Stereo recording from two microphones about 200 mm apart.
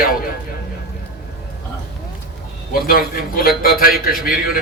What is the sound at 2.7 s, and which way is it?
A man's voice, 45° left (ahead or behind).